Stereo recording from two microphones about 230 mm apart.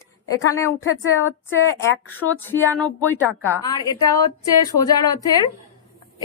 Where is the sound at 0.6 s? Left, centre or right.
Left.